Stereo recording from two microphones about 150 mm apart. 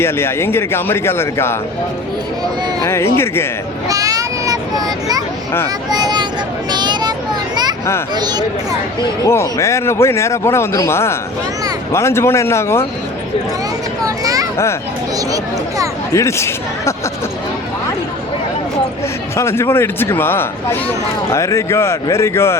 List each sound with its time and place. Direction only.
0.0 s speech: 15° left (ahead or behind)
2.8 s speech: 15° left (ahead or behind)
3.8 s a sound: 25° right (ahead or behind)
5.9 s speech: 30° right (ahead or behind)
6.7 s a sound: 30° right (ahead or behind)
7.5 s children playing: 25° right (ahead or behind)
8.1 s speech: 30° right (ahead or behind)
9.2 s speech: 20° left (ahead or behind)
16.1 s speech: 20° left (ahead or behind)
19.4 s speech: 15° left (ahead or behind)